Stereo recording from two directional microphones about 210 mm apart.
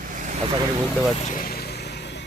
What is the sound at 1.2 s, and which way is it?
Vehicle, 40° left (ahead or behind).